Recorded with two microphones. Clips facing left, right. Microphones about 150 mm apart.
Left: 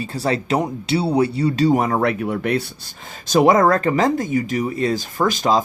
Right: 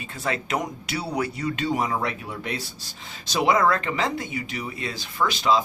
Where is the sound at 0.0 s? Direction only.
35° left (ahead or behind).